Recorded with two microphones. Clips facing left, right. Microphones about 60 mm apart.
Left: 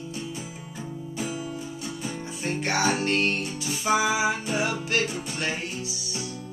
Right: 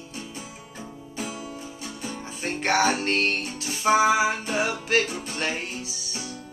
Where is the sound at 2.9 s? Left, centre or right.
Right.